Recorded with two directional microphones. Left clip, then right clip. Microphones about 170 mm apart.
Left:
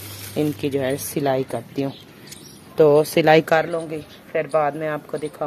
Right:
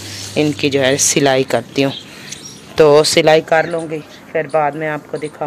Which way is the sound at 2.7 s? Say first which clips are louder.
Right 6 dB; 15° left (ahead or behind).